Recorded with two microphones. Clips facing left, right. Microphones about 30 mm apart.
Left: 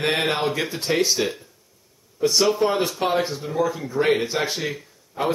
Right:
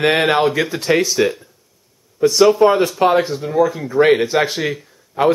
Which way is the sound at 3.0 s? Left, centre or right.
Right.